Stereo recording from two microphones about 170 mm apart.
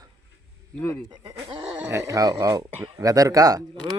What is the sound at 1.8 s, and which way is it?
Speech, 15° right (ahead or behind).